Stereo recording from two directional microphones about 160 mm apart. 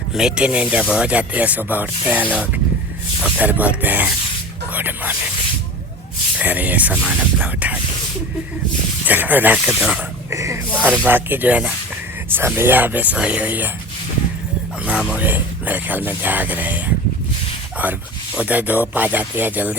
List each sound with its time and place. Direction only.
0.1 s speech: 5° right (ahead or behind)
3.2 s speech: 10° right (ahead or behind)
6.4 s speech: 10° right (ahead or behind)
9.0 s speech: 10° right (ahead or behind)
10.2 s speech: 20° right (ahead or behind)
14.8 s speech: 5° right (ahead or behind)
18.3 s speech: 10° right (ahead or behind)